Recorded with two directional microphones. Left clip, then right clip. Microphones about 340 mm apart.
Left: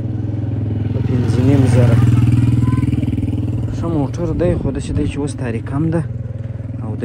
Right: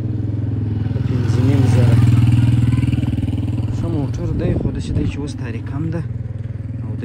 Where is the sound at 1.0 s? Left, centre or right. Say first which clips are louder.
Left 4 dB; centre.